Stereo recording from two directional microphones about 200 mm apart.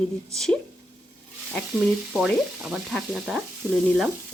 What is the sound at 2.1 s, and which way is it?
Speech, centre (ahead or behind).